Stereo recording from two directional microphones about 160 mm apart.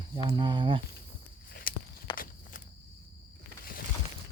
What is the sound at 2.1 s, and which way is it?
Walk, 60° left (ahead or behind).